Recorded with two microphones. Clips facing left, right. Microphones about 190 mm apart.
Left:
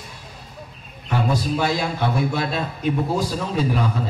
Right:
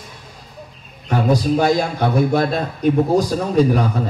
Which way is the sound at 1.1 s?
45° right (ahead or behind).